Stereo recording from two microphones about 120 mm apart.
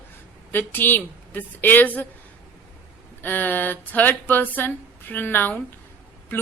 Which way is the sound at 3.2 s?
15° left (ahead or behind).